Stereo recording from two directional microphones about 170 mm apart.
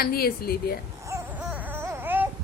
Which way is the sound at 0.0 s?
60° left (ahead or behind).